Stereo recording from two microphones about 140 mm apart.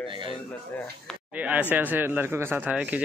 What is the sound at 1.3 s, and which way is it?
Speech, 10° right (ahead or behind).